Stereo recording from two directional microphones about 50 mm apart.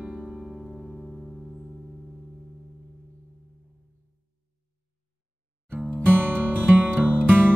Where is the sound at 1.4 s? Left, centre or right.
Centre.